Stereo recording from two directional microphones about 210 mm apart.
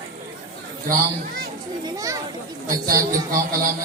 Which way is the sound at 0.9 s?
40° right (ahead or behind).